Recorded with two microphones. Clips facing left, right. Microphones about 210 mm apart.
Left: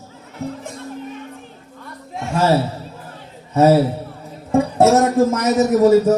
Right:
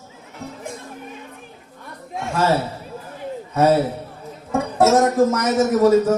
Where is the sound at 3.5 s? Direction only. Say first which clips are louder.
Left 4 dB; 25° left (ahead or behind).